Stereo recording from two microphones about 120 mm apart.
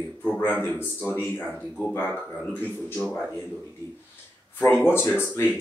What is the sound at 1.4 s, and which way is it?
Speech, 10° left (ahead or behind).